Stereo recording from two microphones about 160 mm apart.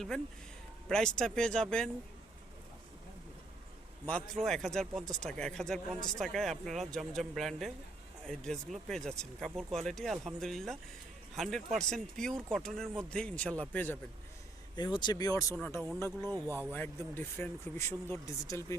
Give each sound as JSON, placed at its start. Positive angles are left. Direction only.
{"t": 0.1, "sound": "speech", "side_deg": 5}
{"t": 4.0, "sound": "speech", "side_deg": 5}
{"t": 14.8, "sound": "speech", "side_deg": 25}